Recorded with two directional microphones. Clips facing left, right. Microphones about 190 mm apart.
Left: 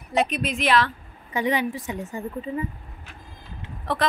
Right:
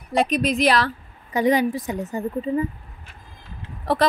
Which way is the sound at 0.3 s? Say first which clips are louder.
Right 4 dB; 35° right (ahead or behind).